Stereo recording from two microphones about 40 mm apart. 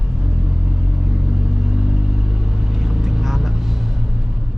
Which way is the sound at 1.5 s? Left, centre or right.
Centre.